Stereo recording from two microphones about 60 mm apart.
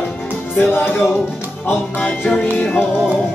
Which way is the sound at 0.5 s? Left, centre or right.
Left.